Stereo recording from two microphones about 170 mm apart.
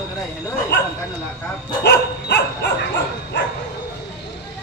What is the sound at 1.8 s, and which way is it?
Dog, 70° left (ahead or behind).